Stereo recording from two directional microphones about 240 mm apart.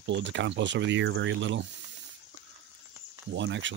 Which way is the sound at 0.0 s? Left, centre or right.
Right.